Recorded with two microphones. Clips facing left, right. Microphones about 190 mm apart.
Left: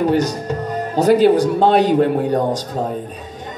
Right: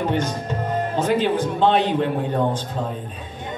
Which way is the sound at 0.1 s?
35° left (ahead or behind).